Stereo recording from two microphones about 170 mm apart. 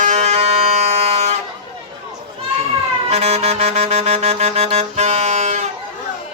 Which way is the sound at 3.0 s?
40° right (ahead or behind).